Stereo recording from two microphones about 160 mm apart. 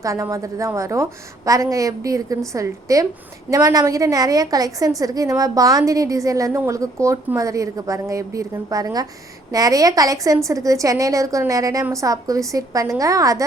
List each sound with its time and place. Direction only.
0.0 s a woman's voice: 20° right (ahead or behind)